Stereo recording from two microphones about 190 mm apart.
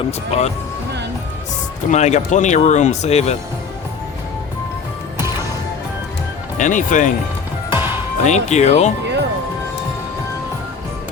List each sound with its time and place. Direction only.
0.3 s speech: 35° left (ahead or behind)
1.9 s speech: 35° left (ahead or behind)
6.6 s speech: 40° left (ahead or behind)
7.7 s music: 10° right (ahead or behind)
8.2 s speech: 35° left (ahead or behind)